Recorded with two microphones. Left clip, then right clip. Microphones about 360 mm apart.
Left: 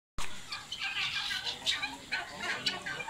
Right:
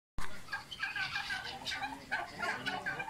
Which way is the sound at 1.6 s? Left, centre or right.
Right.